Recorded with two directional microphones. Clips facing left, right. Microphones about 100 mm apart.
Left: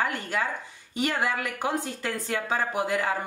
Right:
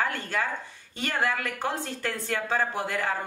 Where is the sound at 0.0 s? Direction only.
15° left (ahead or behind).